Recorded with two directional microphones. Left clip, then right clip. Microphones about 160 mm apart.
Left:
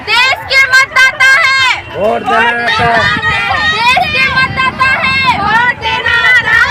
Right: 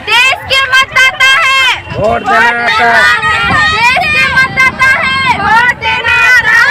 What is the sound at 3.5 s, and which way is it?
Vehicle, 10° right (ahead or behind).